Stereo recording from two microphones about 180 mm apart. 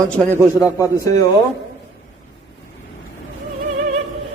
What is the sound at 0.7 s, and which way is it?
Speech, 15° left (ahead or behind).